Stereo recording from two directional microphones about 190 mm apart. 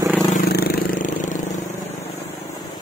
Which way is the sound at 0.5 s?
50° left (ahead or behind).